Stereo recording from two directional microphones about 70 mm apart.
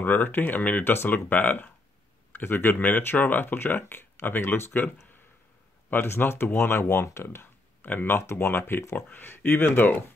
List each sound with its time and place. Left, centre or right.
0.0 s speech: left
7.2 s a sound: left
8.2 s speech: left